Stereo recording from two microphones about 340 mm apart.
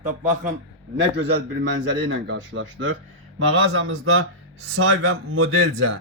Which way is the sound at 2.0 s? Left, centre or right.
Right.